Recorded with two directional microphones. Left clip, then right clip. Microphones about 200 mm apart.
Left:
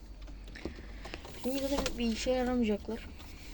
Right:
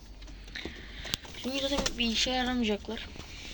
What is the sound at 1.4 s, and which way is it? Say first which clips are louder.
Speech: right 1 dB; centre (ahead or behind).